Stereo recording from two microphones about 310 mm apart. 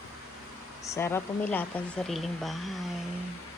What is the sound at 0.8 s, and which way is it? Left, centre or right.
A woman's voice, centre.